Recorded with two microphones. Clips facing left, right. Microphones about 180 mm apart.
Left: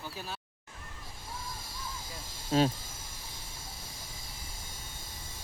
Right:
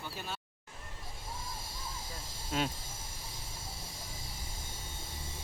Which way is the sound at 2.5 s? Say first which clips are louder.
Left 8 dB; 30° left (ahead or behind).